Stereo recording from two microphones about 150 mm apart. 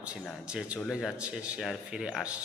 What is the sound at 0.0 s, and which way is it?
A man's voice, 5° right (ahead or behind).